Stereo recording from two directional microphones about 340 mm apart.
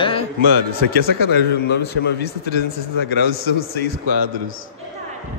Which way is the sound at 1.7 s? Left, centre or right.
Left.